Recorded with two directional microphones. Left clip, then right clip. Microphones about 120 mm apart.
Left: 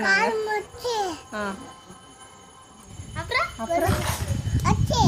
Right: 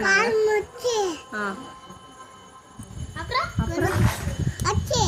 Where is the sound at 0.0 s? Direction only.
20° left (ahead or behind).